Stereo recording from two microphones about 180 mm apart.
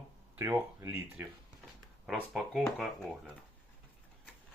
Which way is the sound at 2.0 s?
5° right (ahead or behind).